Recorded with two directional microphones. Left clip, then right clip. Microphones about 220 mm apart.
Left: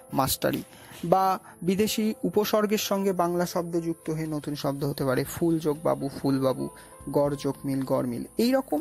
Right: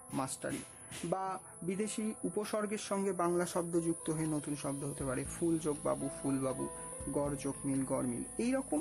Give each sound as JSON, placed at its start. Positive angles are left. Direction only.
{"t": 0.1, "sound": "speech", "side_deg": 30}
{"t": 4.4, "sound": "speech", "side_deg": 25}